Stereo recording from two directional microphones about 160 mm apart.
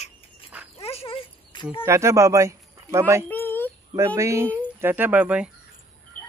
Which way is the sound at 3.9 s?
20° right (ahead or behind).